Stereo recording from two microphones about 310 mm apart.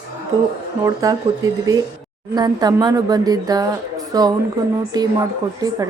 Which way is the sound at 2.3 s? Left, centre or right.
Centre.